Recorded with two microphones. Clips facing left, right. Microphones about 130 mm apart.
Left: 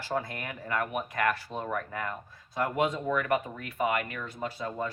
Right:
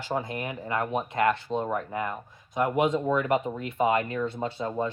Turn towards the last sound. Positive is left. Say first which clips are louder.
# right 4 dB
turn(degrees=-25)  # may be behind; listen again after turning